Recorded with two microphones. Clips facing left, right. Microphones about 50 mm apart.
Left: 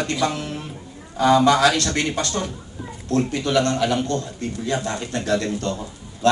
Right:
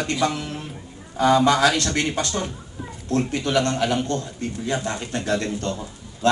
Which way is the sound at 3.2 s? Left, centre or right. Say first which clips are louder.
Left 2 dB; centre.